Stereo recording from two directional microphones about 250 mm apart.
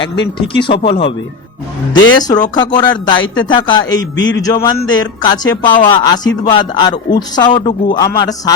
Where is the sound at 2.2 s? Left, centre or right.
Centre.